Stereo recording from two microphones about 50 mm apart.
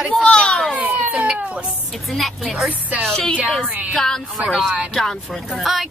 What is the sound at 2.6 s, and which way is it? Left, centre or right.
Speech, right.